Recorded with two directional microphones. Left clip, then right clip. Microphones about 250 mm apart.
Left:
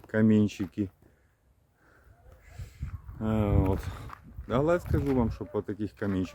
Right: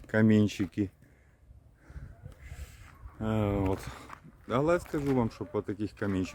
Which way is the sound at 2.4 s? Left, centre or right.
Centre.